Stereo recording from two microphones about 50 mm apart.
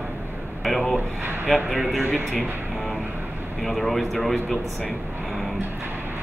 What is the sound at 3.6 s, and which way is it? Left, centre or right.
Speech, centre.